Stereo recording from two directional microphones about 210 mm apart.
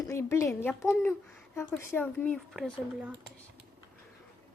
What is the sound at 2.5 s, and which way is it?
Speech, 5° right (ahead or behind).